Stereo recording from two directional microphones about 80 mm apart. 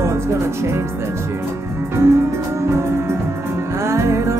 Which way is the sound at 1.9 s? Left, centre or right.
Right.